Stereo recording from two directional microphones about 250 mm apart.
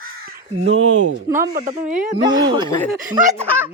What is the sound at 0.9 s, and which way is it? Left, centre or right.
Speech, right.